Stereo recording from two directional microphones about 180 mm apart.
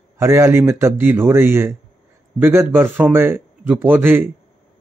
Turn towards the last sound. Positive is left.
turn(degrees=-10)  # may be behind; listen again after turning